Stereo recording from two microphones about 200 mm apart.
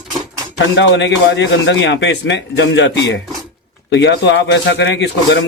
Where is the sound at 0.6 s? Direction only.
65° left (ahead or behind).